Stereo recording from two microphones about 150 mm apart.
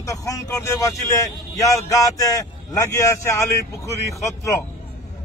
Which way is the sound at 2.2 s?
20° left (ahead or behind).